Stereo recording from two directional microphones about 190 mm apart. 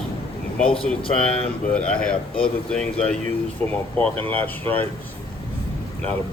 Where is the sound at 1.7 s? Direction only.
5° left (ahead or behind).